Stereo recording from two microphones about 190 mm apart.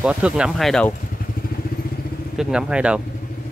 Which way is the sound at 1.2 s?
50° left (ahead or behind).